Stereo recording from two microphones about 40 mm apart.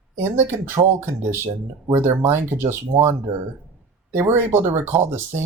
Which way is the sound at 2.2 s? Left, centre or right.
Right.